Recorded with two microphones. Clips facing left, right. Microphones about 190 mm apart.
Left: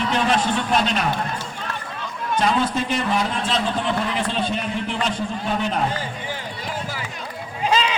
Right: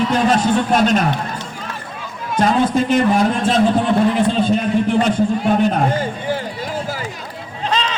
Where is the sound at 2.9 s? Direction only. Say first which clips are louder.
Right 8 dB; 45° right (ahead or behind).